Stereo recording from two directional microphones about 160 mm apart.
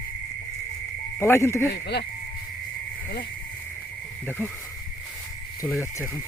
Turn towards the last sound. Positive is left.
turn(degrees=15)  # may be behind; listen again after turning